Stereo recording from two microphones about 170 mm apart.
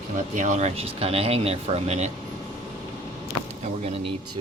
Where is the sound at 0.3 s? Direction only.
45° right (ahead or behind).